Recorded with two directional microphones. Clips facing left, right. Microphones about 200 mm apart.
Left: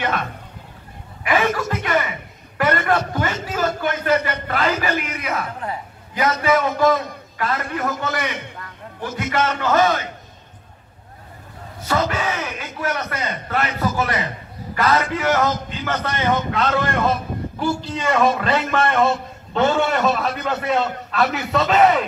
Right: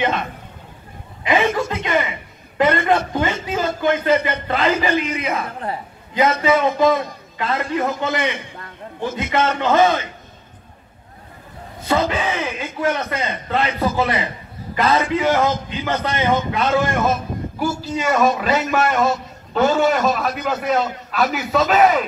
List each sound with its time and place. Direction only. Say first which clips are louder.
1.2 s chuckle: right 2 dB; 25° right (ahead or behind)
1.6 s a sound: right 1 dB; 25° right (ahead or behind)
6.1 s a man's voice: right 2 dB; 20° right (ahead or behind)
11.9 s a man's voice: right 2 dB; 20° right (ahead or behind); by 22.0 s 5° right (ahead or behind)